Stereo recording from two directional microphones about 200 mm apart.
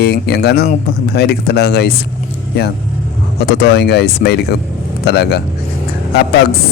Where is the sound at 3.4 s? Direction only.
50° left (ahead or behind).